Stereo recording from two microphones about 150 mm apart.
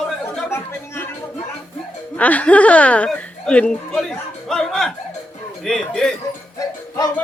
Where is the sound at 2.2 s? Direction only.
10° left (ahead or behind).